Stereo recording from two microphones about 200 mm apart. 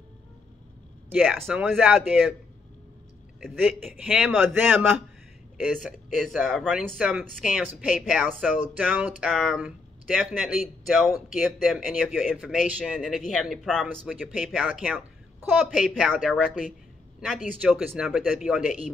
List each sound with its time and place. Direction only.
1.4 s speech: 5° right (ahead or behind)
3.3 s speech: centre (ahead or behind)
4.3 s speech: 10° right (ahead or behind)